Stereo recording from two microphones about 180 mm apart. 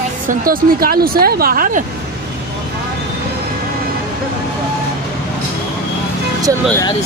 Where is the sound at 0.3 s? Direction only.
50° right (ahead or behind).